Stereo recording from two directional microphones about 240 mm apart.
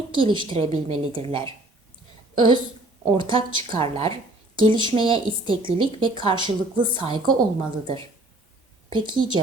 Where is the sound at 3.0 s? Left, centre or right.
Centre.